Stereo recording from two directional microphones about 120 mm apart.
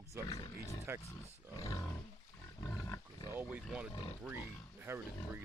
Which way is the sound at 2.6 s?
30° left (ahead or behind).